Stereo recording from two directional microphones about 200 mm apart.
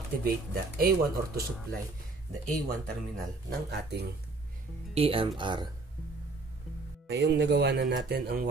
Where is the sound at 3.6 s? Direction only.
55° right (ahead or behind).